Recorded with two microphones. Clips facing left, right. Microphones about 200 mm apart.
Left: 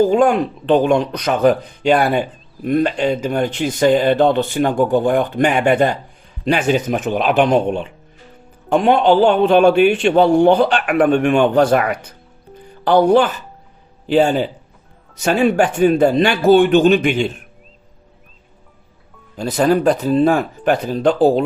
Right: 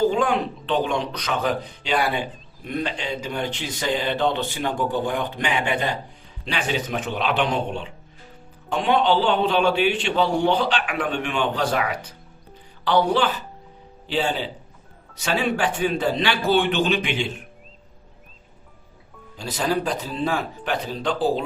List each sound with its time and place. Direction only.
0.1 s speech: 45° left (ahead or behind)
19.4 s speech: 55° left (ahead or behind)